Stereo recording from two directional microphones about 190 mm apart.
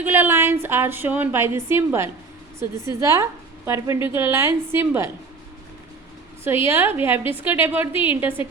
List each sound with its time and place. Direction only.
0.0 s a woman's voice: 10° right (ahead or behind)
6.4 s a woman's voice: 15° right (ahead or behind)